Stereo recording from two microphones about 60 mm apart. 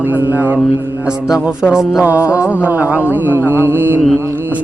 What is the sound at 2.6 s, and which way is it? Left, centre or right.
Mantra, right.